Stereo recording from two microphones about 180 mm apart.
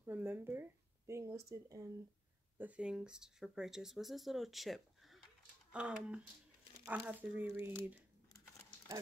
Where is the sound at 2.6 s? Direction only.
5° right (ahead or behind).